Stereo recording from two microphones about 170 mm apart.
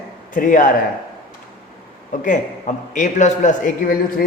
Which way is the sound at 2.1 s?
50° left (ahead or behind).